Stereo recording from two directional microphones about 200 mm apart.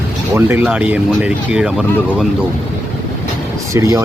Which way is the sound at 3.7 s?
15° right (ahead or behind).